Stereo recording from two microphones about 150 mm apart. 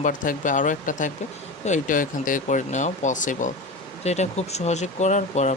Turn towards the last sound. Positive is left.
turn(degrees=50)  # may be behind; listen again after turning